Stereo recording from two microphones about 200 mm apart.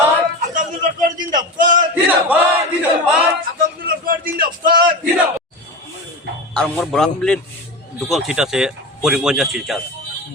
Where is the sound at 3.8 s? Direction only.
45° right (ahead or behind).